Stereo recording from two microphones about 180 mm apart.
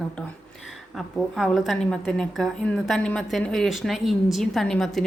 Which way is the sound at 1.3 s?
Centre (ahead or behind).